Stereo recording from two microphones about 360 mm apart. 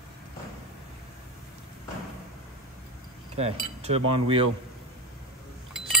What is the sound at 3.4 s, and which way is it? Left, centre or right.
Speech, centre.